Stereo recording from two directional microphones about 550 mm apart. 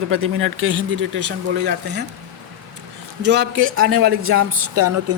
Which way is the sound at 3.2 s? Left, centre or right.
Centre.